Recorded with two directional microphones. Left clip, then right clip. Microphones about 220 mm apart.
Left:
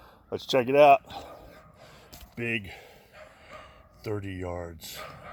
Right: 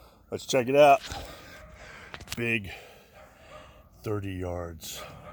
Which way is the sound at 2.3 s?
10° right (ahead or behind).